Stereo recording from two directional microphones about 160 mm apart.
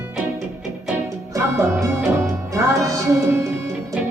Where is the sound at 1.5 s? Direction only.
20° right (ahead or behind).